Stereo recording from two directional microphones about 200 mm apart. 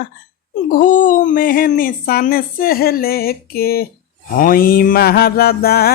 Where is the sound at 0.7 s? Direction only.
40° left (ahead or behind).